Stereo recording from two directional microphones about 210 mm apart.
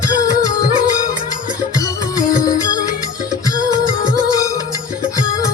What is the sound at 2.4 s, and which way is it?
Music, 15° left (ahead or behind).